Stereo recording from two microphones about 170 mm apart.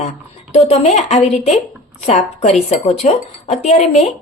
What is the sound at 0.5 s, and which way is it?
A woman's voice, 40° left (ahead or behind).